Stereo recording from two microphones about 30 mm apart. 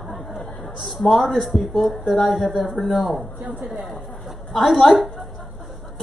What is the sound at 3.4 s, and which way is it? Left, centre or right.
Speech, right.